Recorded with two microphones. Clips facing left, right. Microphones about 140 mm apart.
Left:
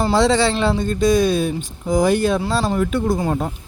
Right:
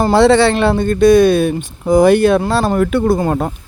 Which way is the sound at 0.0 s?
60° right (ahead or behind).